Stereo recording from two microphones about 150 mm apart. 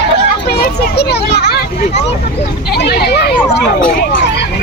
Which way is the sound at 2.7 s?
90° left.